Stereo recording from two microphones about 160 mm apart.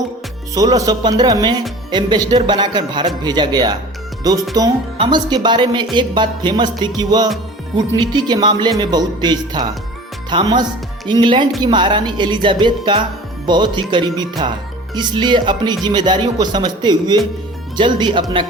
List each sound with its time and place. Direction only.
0.5 s speech: 25° right (ahead or behind)